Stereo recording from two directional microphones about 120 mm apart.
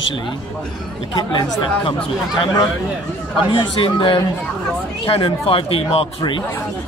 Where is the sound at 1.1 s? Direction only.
35° left (ahead or behind).